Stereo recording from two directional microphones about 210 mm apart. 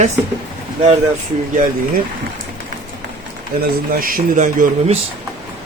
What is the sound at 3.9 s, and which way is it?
Speech, 45° right (ahead or behind).